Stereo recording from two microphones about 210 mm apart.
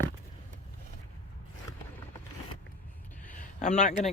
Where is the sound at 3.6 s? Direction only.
35° left (ahead or behind).